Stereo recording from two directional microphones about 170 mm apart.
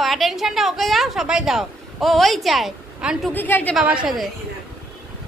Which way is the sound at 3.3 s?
10° left (ahead or behind).